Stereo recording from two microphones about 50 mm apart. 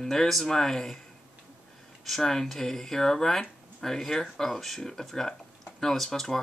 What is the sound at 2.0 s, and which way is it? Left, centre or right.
Speech, centre.